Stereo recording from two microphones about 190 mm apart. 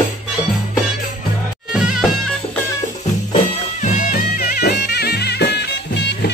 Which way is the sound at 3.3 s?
40° left (ahead or behind).